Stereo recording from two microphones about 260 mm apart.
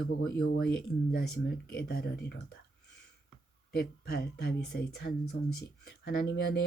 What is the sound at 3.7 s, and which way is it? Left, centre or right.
Speech, left.